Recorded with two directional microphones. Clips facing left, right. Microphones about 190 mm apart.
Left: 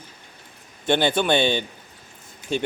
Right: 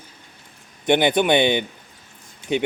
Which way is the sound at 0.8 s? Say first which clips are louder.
Right 3 dB; 15° right (ahead or behind).